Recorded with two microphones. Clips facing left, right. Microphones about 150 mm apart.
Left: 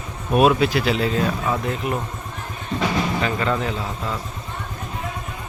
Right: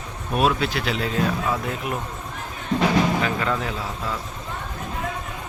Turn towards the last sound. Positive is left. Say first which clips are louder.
# left 2 dB
turn(degrees=0)  # may be behind; listen again after turning